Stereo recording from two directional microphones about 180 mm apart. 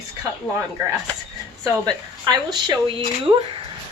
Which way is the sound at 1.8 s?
25° right (ahead or behind).